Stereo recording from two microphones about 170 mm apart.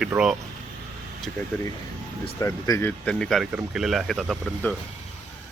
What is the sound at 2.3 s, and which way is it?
Speech, 20° left (ahead or behind).